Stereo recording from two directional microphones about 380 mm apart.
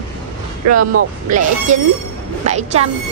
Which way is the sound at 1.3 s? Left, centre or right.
Centre.